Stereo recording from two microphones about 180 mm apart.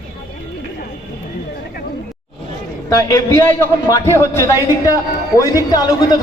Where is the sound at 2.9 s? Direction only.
20° left (ahead or behind).